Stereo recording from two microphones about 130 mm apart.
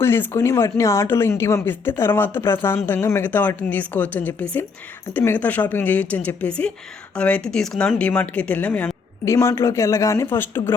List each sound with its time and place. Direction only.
0.0 s speech: 20° left (ahead or behind)
9.2 s speech: 25° left (ahead or behind)